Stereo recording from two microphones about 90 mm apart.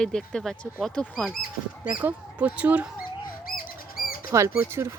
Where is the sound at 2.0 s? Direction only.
15° right (ahead or behind).